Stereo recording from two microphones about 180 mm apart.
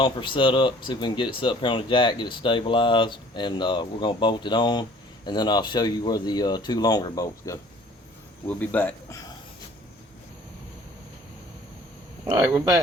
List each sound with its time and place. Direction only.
0.0 s speech: 25° left (ahead or behind)
12.3 s speech: 20° right (ahead or behind)